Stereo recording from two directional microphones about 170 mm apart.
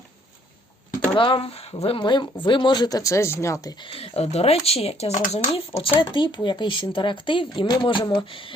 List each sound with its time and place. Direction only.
1.1 s speech: 30° left (ahead or behind)
3.8 s speech: 35° left (ahead or behind)